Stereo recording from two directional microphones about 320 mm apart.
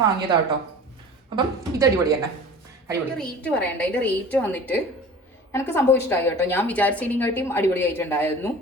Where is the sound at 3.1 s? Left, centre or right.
Centre.